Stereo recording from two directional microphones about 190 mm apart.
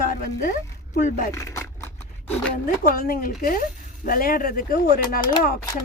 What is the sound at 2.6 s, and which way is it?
A woman's voice, 45° left (ahead or behind).